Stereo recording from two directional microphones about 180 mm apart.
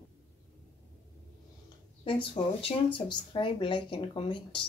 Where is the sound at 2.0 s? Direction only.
30° left (ahead or behind).